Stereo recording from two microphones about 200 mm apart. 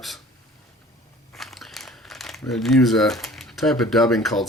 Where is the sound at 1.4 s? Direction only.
Centre (ahead or behind).